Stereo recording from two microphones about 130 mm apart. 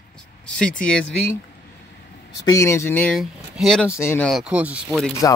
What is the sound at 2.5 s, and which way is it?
Speech, 20° left (ahead or behind).